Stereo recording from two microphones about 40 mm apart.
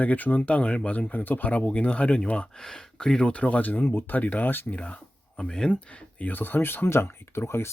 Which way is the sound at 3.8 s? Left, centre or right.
Left.